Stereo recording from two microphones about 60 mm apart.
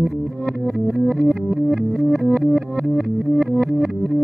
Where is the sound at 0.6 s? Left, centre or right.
Centre.